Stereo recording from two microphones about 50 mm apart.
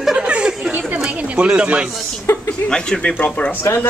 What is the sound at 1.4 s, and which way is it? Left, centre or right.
Speech, centre.